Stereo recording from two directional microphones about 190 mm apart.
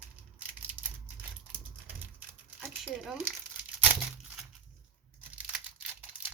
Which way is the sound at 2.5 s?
5° right (ahead or behind).